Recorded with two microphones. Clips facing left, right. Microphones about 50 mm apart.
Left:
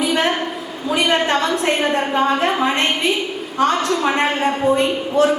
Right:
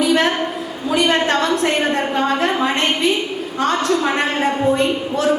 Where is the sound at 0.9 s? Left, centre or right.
Left.